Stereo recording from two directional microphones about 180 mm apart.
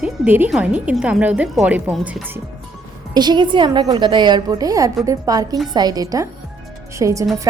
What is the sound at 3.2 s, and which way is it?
A woman's voice, 25° right (ahead or behind).